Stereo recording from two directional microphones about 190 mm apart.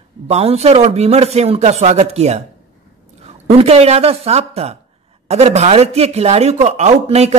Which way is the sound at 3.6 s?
35° right (ahead or behind).